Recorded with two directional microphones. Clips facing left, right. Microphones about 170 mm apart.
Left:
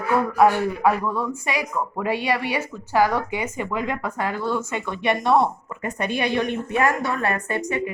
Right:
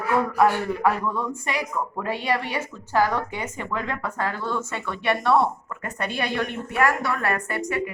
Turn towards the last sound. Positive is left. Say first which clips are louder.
# left 2 dB
turn(degrees=20)  # may be behind; listen again after turning